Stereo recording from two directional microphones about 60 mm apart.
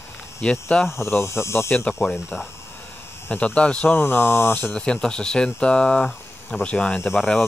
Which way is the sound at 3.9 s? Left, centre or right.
Left.